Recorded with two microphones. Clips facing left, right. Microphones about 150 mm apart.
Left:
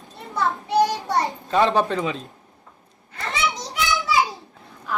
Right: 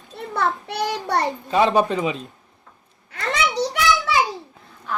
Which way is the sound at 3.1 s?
80° right.